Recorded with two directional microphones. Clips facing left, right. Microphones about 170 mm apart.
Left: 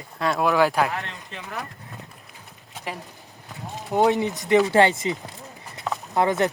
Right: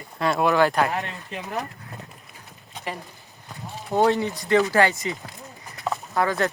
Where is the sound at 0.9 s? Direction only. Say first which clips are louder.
Right 3 dB; 20° right (ahead or behind).